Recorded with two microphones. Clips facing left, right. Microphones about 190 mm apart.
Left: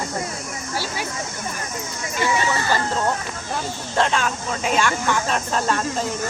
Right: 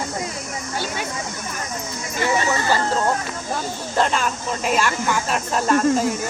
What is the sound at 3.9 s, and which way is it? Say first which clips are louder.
Speech: even; centre (ahead or behind).